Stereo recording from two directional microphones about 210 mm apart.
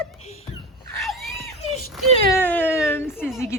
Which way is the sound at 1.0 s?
Centre (ahead or behind).